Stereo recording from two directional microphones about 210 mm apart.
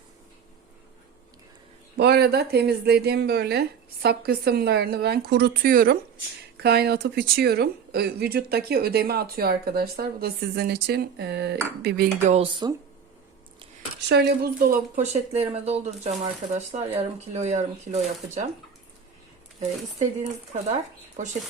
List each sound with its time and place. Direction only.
2.0 s speech: 50° right (ahead or behind)
12.3 s speech: 25° right (ahead or behind)
14.1 s speech: 50° right (ahead or behind); by 18.0 s 30° right (ahead or behind)
20.0 s speech: 30° right (ahead or behind)